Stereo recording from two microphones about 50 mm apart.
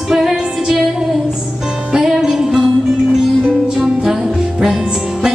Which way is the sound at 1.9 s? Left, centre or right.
Centre.